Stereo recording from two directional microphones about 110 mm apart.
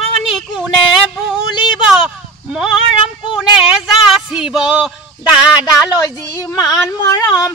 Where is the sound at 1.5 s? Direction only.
45° left (ahead or behind).